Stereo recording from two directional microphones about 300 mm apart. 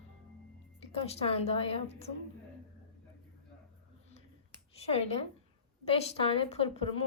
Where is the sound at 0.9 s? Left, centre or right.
Centre.